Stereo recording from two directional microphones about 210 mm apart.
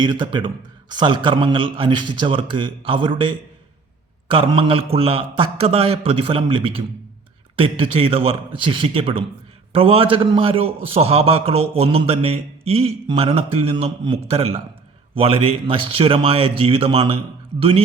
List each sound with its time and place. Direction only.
0.0 s speech: 20° right (ahead or behind)